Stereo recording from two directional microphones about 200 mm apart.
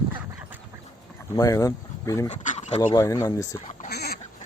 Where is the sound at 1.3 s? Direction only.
20° left (ahead or behind).